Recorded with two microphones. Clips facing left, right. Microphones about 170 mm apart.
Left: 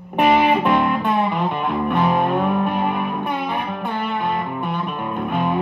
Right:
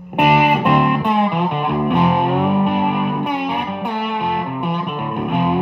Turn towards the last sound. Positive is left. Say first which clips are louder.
# right 3 dB
turn(degrees=-10)  # may be behind; listen again after turning